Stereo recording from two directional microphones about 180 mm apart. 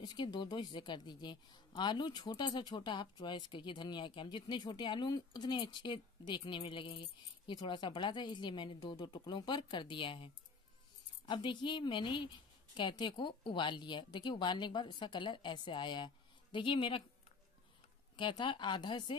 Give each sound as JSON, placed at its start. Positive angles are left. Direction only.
{"t": 0.0, "sound": "speech", "side_deg": 25}
{"t": 18.1, "sound": "speech", "side_deg": 25}